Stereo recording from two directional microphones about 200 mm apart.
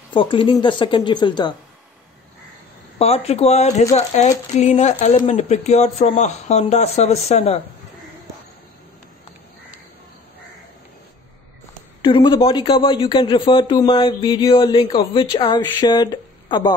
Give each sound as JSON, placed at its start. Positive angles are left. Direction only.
{"t": 0.1, "sound": "speech", "side_deg": 25}
{"t": 3.0, "sound": "speech", "side_deg": 30}
{"t": 12.0, "sound": "speech", "side_deg": 25}